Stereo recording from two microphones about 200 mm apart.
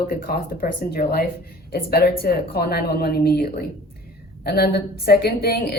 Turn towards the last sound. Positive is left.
turn(degrees=50)  # may be behind; listen again after turning